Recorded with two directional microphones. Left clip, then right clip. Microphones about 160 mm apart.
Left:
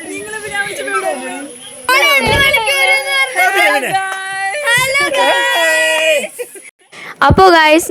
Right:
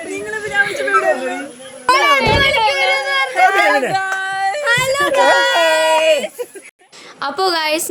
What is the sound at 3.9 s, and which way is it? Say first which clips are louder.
Yodeling: left 1 dB; 15° right (ahead or behind).